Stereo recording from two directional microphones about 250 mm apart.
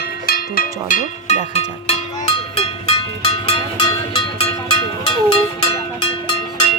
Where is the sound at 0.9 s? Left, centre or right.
Left.